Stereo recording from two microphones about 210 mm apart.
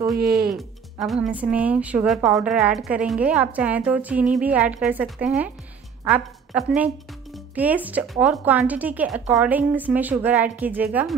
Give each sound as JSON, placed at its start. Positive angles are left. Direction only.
{"t": 0.2, "sound": "speech", "side_deg": -45}
{"t": 0.6, "sound": "a woman's voice", "side_deg": 0}